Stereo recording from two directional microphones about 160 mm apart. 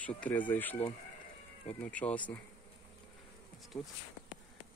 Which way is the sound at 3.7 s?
15° left (ahead or behind).